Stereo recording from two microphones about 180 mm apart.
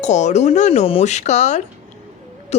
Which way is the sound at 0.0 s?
40° left (ahead or behind).